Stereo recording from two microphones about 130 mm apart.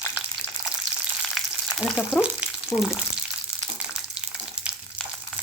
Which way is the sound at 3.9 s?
10° right (ahead or behind).